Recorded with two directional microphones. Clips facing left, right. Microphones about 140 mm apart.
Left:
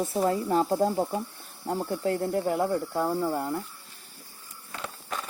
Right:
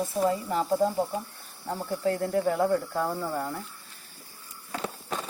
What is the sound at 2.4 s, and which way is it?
Speech, 10° left (ahead or behind).